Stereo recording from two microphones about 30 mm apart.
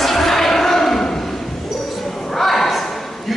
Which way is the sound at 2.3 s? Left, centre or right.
Centre.